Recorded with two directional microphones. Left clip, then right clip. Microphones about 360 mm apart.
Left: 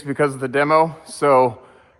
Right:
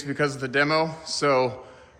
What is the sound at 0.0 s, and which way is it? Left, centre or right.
Speech, centre.